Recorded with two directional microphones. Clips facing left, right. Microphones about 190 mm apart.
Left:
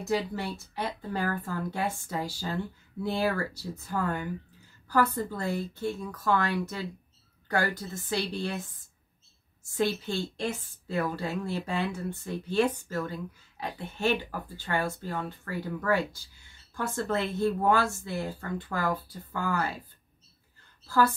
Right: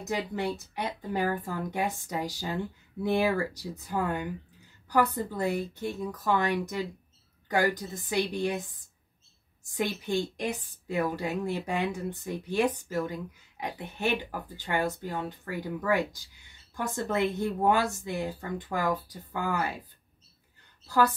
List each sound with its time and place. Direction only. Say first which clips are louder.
0.0 s a woman's voice: left 1 dB; 20° right (ahead or behind)
9.7 s a woman's voice: left 1 dB; 15° right (ahead or behind)
20.8 s a woman's voice: even; 15° right (ahead or behind)